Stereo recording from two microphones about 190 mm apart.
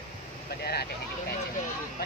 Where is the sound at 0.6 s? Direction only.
55° left (ahead or behind).